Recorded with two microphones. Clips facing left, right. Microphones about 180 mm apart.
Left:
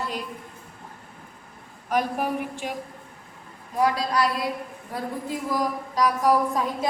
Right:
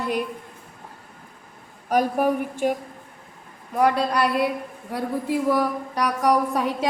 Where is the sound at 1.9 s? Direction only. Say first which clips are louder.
Right 5 dB; 45° right (ahead or behind).